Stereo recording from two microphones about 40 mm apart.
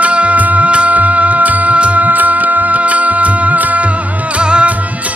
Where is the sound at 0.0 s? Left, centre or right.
Right.